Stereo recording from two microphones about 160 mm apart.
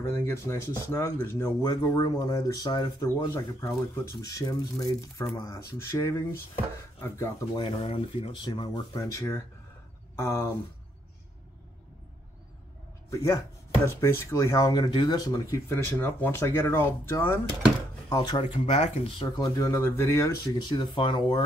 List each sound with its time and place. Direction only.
0.0 s speech: 15° left (ahead or behind)
7.5 s speech: 35° left (ahead or behind); by 10.5 s 15° left (ahead or behind)
13.1 s speech: 20° left (ahead or behind)
18.1 s speech: 25° left (ahead or behind)
18.7 s speech: 45° left (ahead or behind)
19.1 s speech: 25° left (ahead or behind)
20.5 s speech: 30° left (ahead or behind)